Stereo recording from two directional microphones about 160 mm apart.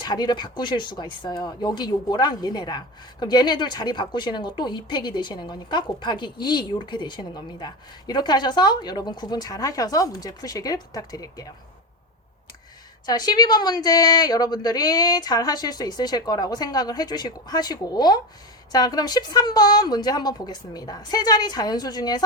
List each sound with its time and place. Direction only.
0.0 s speech: 25° left (ahead or behind)
13.1 s speech: 25° left (ahead or behind)